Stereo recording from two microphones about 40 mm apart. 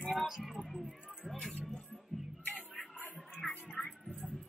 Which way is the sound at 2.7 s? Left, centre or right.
Left.